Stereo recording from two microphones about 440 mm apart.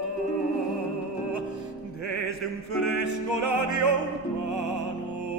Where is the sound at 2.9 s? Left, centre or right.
Right.